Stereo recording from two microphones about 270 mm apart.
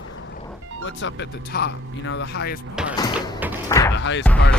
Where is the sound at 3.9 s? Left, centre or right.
Left.